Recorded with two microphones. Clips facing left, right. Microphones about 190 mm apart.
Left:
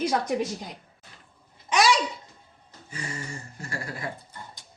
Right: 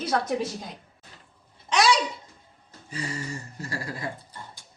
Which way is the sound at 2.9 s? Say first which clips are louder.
Right 3 dB; 35° right (ahead or behind).